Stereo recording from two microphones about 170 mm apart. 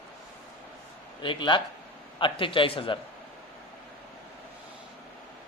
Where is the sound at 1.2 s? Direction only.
30° left (ahead or behind).